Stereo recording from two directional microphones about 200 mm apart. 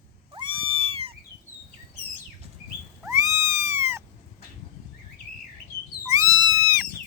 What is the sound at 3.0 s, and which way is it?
Cat, 15° right (ahead or behind).